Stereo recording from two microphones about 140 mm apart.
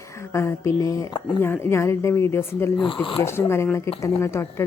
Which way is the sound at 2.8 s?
35° left (ahead or behind).